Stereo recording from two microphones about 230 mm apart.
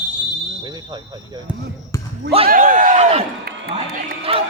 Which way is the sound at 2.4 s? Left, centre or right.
Right.